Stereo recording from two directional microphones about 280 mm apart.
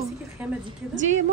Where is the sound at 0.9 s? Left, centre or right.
Right.